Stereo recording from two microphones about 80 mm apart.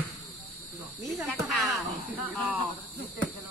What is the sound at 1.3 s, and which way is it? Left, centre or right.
Speech, centre.